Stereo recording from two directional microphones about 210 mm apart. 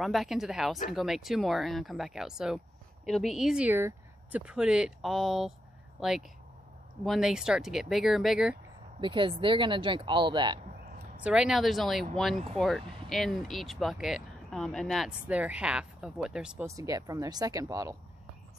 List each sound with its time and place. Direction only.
0.0 s speech: centre (ahead or behind)
9.0 s speech: 25° right (ahead or behind)
11.2 s speech: 5° right (ahead or behind)
16.6 s speech: 15° right (ahead or behind)